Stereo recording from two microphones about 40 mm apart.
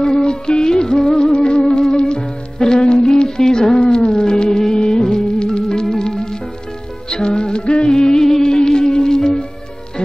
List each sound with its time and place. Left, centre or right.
0.0 s music: left